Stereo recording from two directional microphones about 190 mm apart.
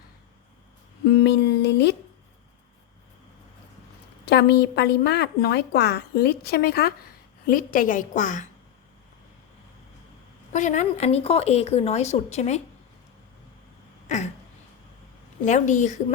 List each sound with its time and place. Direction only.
1.2 s a woman's voice: 60° left (ahead or behind)
4.3 s a woman's voice: 60° left (ahead or behind); by 8.4 s 40° left (ahead or behind)
10.5 s speech: 40° left (ahead or behind)
15.4 s speech: 40° left (ahead or behind)